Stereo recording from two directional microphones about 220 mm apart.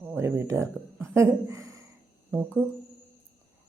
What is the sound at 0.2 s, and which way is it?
Speech, 10° right (ahead or behind).